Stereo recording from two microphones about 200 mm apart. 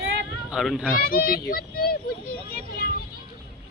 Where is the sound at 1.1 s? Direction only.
45° left (ahead or behind).